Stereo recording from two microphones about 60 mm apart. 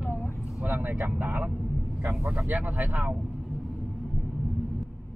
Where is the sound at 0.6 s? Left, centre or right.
Right.